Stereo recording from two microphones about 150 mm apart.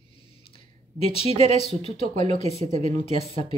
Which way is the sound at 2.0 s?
50° right (ahead or behind).